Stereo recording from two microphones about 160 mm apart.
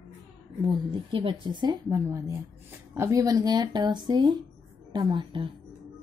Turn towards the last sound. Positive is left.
turn(degrees=-30)  # may be behind; listen again after turning